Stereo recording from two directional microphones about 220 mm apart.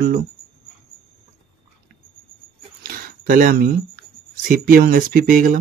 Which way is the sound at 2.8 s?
40° right (ahead or behind).